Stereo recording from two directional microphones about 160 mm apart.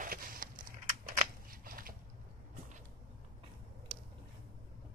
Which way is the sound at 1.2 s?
65° right (ahead or behind).